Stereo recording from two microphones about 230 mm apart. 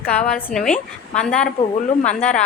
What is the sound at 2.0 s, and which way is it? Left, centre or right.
Speech, left.